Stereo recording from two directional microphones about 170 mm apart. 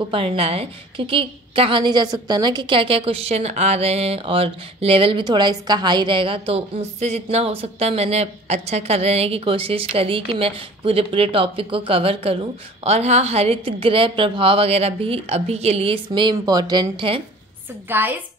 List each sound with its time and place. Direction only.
0.1 s a woman's voice: 30° right (ahead or behind)
16.1 s speech: 25° right (ahead or behind)
17.8 s a woman's voice: 10° right (ahead or behind)